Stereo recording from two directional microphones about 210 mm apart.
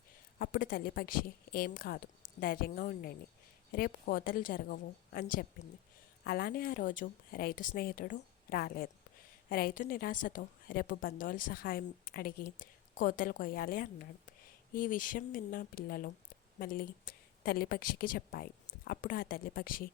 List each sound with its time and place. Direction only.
0.3 s a woman's voice: 45° left (ahead or behind)